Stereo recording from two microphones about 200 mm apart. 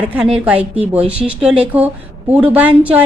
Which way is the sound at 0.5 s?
30° right (ahead or behind).